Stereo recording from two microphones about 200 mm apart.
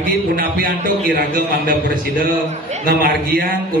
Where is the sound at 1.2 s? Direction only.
45° right (ahead or behind).